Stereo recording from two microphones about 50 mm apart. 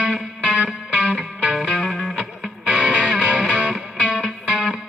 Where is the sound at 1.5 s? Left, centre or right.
Centre.